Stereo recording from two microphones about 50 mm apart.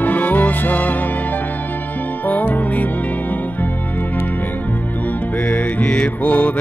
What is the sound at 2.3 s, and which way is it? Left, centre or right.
Music, left.